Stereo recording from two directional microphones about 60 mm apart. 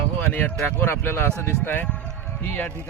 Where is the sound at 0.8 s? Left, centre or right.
Left.